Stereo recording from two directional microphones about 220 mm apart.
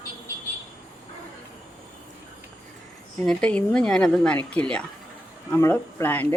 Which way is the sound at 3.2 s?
5° left (ahead or behind).